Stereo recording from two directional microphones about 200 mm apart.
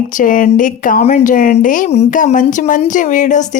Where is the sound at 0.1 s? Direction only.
40° left (ahead or behind).